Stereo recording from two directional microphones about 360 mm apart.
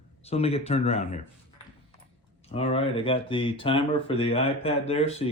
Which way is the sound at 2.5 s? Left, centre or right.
Centre.